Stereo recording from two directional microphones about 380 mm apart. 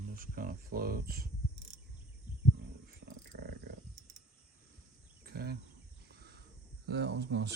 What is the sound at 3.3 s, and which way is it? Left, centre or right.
Wild animals, right.